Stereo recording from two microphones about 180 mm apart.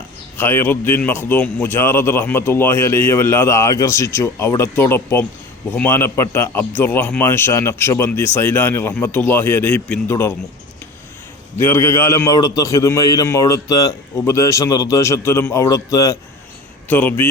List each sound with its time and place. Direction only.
0.3 s a man's voice: 15° left (ahead or behind)
11.5 s a man's voice: 15° left (ahead or behind)